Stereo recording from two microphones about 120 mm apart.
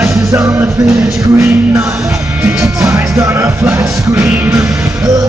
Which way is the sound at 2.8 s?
25° right (ahead or behind).